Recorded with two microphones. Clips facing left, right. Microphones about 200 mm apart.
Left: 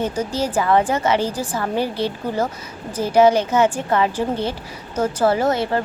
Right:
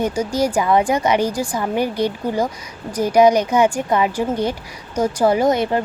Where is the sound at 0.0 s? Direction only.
15° right (ahead or behind).